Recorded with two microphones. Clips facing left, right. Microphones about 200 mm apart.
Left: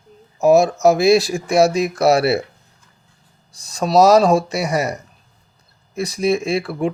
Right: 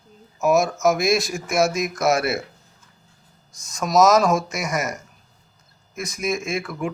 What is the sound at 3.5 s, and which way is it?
Speech, 35° left (ahead or behind).